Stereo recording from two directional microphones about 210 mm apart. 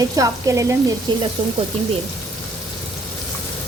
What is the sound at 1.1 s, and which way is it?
Frying, 20° right (ahead or behind).